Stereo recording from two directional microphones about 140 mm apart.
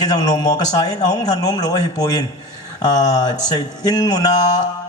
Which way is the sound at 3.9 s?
30° left (ahead or behind).